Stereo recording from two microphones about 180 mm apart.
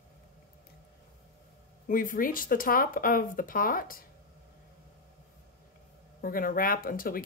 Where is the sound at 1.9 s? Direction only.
50° left (ahead or behind).